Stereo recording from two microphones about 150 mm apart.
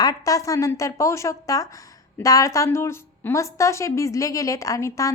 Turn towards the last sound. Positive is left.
turn(degrees=20)  # may be behind; listen again after turning